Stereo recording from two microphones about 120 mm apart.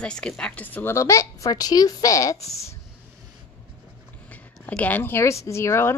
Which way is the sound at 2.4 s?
60° left (ahead or behind).